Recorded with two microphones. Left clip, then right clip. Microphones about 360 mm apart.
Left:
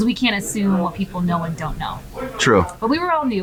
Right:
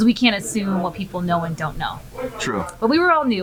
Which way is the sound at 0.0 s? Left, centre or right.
Right.